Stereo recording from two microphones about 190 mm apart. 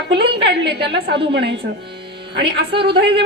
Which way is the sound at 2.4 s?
25° right (ahead or behind).